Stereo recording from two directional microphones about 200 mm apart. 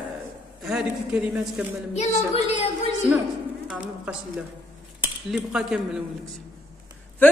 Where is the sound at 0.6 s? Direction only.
5° right (ahead or behind).